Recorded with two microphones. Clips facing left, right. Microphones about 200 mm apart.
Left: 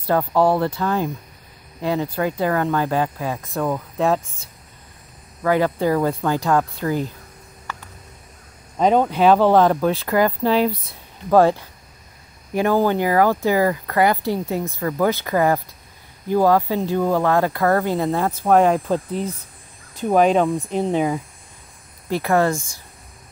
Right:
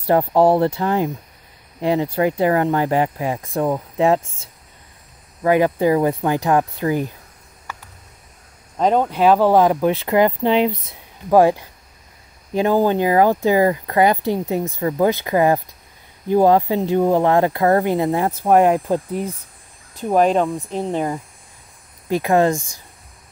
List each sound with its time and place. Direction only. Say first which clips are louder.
0.0 s speech: right 3 dB; 25° right (ahead or behind)
8.7 s speech: left 1 dB; centre (ahead or behind)
20.0 s speech: even; centre (ahead or behind)
22.1 s speech: right 2 dB; 15° right (ahead or behind)